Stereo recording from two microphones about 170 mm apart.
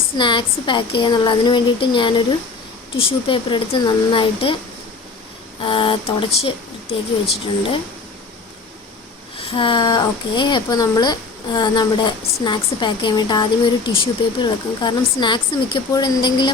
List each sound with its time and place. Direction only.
0.2 s speech: 30° left (ahead or behind)
5.6 s speech: 30° left (ahead or behind)
9.4 s speech: 30° left (ahead or behind)